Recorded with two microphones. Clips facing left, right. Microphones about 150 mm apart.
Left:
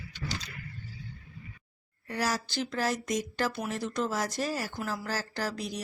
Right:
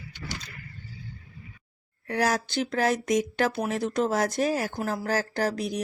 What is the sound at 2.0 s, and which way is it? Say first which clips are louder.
Speech: right 6 dB; 60° right (ahead or behind).